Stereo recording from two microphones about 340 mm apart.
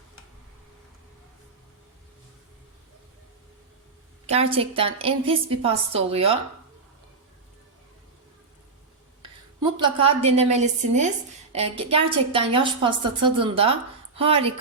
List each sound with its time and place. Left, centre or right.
4.3 s a woman's voice: centre
9.2 s a woman's voice: centre